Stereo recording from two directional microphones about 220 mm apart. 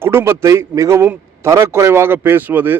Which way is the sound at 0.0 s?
10° right (ahead or behind).